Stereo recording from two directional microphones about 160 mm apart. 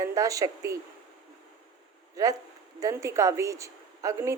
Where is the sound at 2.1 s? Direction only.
20° right (ahead or behind).